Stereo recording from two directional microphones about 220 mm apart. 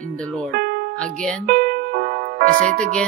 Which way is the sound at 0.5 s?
45° right (ahead or behind).